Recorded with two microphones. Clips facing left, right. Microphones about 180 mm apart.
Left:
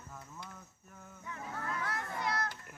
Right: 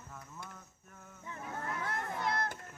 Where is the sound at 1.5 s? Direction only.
20° right (ahead or behind).